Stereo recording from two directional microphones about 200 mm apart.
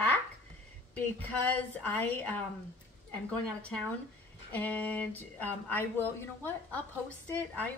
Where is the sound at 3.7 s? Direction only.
5° left (ahead or behind).